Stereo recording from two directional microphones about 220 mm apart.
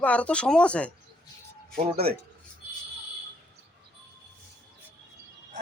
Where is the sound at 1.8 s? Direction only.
25° right (ahead or behind).